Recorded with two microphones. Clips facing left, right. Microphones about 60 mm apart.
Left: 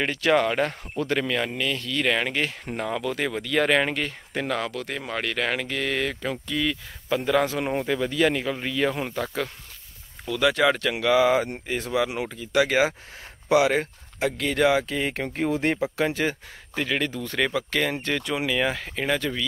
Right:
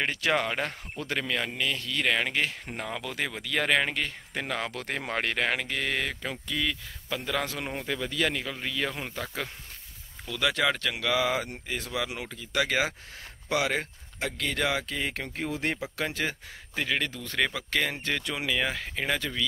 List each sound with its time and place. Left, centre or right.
0.0 s speech: centre
4.5 s speech: centre
4.7 s speech: right
5.4 s speech: centre
7.1 s a man's voice: left
15.2 s speech: left
16.0 s speech: centre
16.7 s speech: centre